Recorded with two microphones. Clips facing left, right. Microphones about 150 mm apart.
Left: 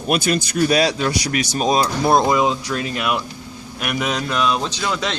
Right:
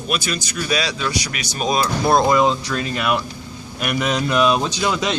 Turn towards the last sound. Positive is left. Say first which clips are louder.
# right 2 dB
turn(degrees=-10)  # may be behind; listen again after turning